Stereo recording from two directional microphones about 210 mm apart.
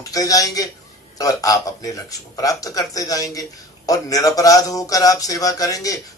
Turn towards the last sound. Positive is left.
turn(degrees=15)  # may be behind; listen again after turning